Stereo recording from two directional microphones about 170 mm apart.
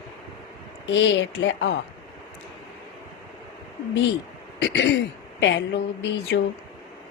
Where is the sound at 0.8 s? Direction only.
90° left.